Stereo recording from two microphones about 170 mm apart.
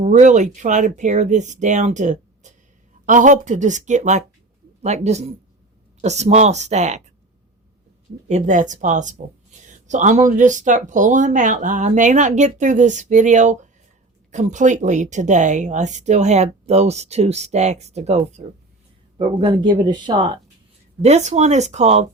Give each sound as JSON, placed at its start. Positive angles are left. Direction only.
{"t": 0.0, "sound": "speech", "side_deg": -45}
{"t": 8.3, "sound": "speech", "side_deg": -45}
{"t": 19.2, "sound": "speech", "side_deg": -25}
{"t": 21.0, "sound": "speech", "side_deg": -40}